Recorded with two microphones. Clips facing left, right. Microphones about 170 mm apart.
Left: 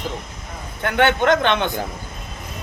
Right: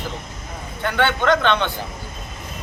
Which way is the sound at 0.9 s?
20° left (ahead or behind).